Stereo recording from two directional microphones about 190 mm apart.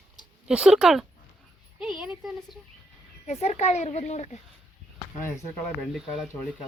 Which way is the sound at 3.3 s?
35° left (ahead or behind).